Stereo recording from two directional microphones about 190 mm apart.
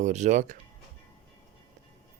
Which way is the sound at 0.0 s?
40° right (ahead or behind).